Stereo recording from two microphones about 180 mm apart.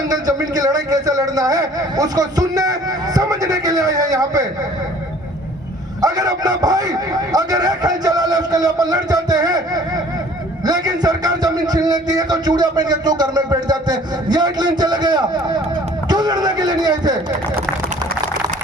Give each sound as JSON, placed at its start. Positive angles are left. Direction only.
{"t": 0.1, "sound": "a man's voice", "side_deg": -20}
{"t": 6.0, "sound": "a man's voice", "side_deg": -20}